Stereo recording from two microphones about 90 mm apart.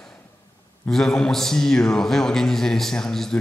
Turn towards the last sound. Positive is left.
turn(degrees=5)  # may be behind; listen again after turning